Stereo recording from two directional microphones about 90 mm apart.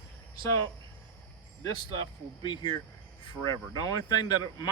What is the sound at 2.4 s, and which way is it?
A man's voice, 55° left (ahead or behind).